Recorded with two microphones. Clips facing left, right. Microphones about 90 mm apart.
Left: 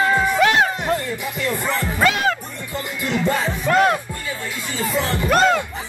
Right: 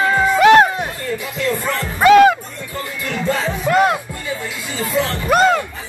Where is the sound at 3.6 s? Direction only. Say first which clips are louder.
Right 1 dB; 5° right (ahead or behind).